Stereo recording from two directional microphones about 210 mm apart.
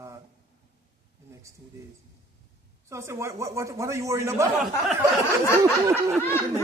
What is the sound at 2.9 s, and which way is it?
Speech, 15° right (ahead or behind).